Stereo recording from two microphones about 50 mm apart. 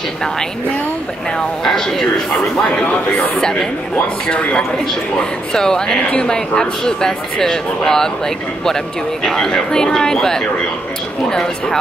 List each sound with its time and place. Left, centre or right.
1.6 s speech: centre
2.8 s speech: left
3.3 s speech: centre